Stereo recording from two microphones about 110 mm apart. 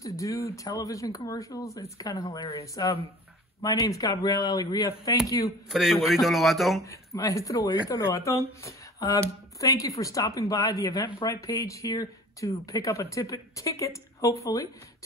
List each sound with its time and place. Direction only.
0.0 s speech: 30° left (ahead or behind)
5.7 s a man's voice: 5° right (ahead or behind)
6.9 s speech: 30° left (ahead or behind)